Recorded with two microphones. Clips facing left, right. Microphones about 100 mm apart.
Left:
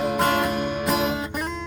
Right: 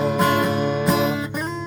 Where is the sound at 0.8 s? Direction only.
Centre (ahead or behind).